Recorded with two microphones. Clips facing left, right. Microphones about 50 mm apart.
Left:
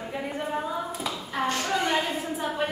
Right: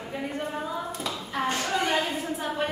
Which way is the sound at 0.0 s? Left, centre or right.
Centre.